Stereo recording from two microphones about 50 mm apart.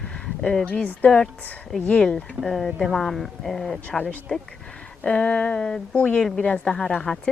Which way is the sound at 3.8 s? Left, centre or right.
Left.